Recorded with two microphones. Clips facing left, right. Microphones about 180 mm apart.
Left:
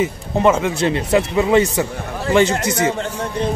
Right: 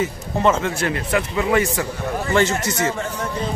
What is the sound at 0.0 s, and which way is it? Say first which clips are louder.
Speech: left 3 dB; 15° left (ahead or behind).